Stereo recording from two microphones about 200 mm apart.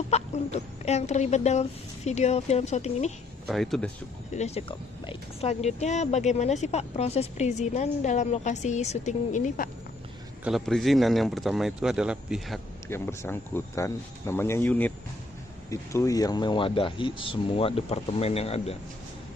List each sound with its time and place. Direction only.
0.1 s speech: 35° left (ahead or behind)
3.4 s speech: centre (ahead or behind)
4.4 s speech: 30° left (ahead or behind)
10.4 s a man's voice: centre (ahead or behind)
12.9 s speech: 10° left (ahead or behind); by 18.8 s 30° left (ahead or behind)